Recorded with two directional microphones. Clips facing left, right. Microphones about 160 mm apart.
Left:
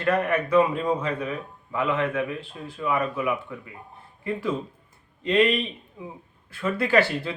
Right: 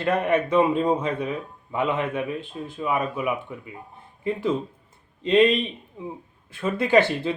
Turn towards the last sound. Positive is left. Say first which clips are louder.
# right 3 dB
turn(degrees=-20)  # may be behind; listen again after turning